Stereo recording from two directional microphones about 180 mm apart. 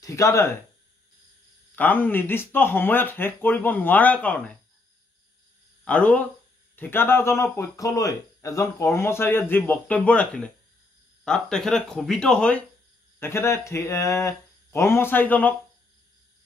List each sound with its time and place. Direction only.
0.0 s speech: 15° left (ahead or behind)
1.8 s speech: 10° left (ahead or behind)
5.9 s speech: 5° left (ahead or behind)